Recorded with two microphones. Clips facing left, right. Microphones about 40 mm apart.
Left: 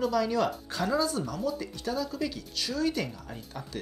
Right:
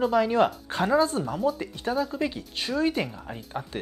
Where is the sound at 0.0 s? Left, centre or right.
Right.